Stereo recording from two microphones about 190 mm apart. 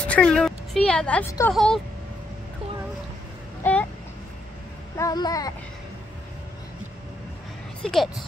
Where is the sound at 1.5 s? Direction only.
Centre (ahead or behind).